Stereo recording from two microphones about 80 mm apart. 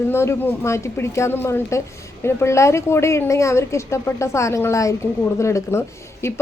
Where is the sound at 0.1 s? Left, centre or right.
Left.